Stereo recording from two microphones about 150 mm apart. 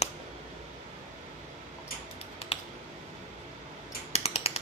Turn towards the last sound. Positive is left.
turn(degrees=45)  # may be behind; listen again after turning